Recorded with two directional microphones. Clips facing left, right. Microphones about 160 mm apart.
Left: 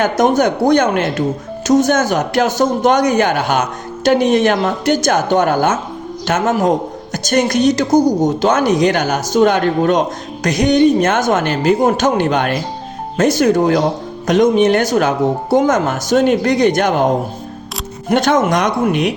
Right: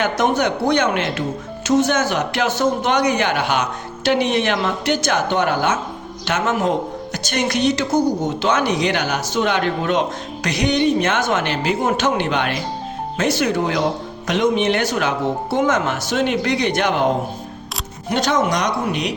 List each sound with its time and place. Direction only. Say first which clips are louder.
0.0 s a man's voice: left 5 dB; 45° left (ahead or behind)
18.1 s a man's voice: left 5 dB; 50° left (ahead or behind)